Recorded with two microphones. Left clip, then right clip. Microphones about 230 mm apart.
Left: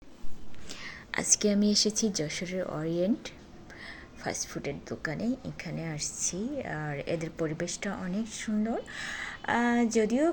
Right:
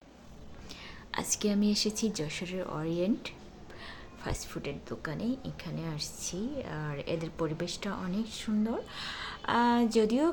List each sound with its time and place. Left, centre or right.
0.7 s whispering: left
1.1 s speech: centre